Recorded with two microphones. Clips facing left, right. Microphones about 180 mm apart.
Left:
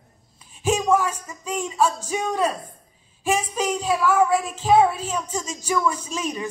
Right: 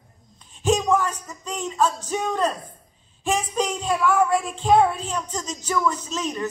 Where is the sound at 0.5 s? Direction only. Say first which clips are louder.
Even; 5° left (ahead or behind).